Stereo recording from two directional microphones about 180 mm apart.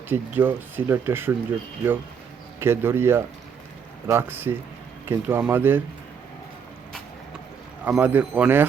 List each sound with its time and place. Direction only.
0.1 s speech: 10° right (ahead or behind)
2.6 s speech: 10° right (ahead or behind)
7.9 s speech: 5° right (ahead or behind)